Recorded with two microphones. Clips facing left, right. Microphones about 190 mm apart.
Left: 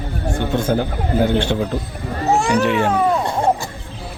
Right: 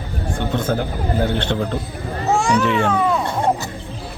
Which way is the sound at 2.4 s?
55° left (ahead or behind).